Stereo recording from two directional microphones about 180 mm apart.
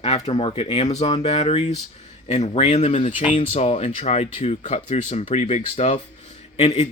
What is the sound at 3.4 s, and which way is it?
Speech, 35° left (ahead or behind).